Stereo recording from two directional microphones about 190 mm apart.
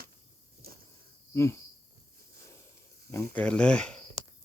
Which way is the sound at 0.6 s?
50° right (ahead or behind).